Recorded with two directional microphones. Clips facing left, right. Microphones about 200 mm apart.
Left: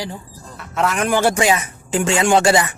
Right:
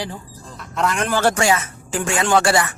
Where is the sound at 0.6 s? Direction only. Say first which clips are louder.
Left 2 dB; 5° left (ahead or behind).